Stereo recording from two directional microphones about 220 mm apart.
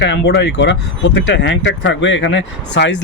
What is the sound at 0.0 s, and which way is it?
Speech, 50° left (ahead or behind).